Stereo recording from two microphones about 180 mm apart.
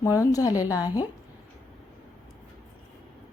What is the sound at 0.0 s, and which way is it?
Speech, 20° left (ahead or behind).